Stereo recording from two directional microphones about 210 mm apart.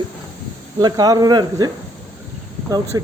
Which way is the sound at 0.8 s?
20° right (ahead or behind).